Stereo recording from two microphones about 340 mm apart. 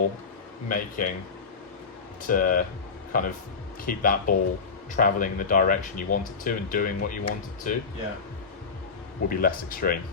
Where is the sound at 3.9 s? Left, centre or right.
Left.